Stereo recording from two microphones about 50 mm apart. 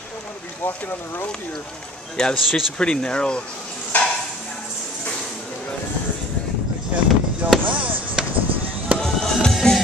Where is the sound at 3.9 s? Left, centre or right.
Left.